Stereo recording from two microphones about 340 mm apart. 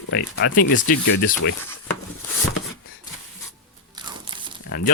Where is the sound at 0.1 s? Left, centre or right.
Left.